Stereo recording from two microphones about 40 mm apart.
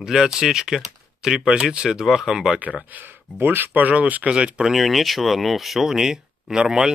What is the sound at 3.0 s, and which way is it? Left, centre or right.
Speech, right.